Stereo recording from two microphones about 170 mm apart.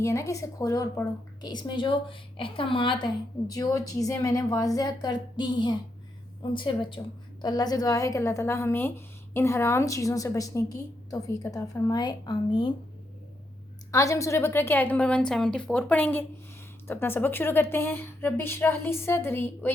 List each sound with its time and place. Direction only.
0.0 s a woman's voice: 15° left (ahead or behind)
13.9 s a woman's voice: 20° left (ahead or behind)